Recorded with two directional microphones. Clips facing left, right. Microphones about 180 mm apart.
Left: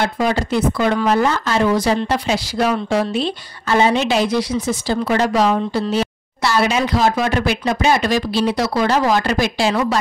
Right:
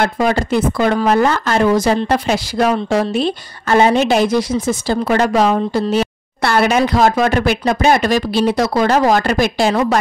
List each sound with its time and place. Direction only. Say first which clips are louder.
0.0 s speech: right 3 dB; 50° right (ahead or behind)